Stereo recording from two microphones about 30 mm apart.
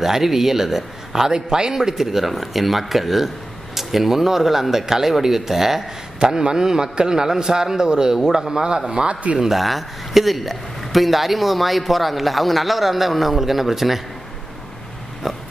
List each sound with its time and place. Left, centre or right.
0.0 s speech: centre
1.3 s speech: right
6.1 s a man's voice: right
9.6 s speech: centre
15.2 s speech: centre